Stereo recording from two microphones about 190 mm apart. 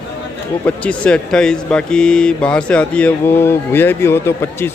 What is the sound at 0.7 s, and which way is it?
Speech, 5° left (ahead or behind).